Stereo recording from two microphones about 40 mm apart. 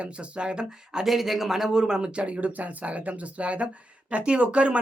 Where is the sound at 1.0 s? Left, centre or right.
Centre.